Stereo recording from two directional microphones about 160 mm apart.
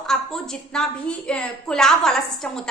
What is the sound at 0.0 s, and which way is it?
A woman's voice, 5° left (ahead or behind).